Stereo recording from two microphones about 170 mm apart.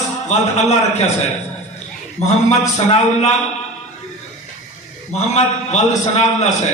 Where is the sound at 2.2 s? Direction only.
40° left (ahead or behind).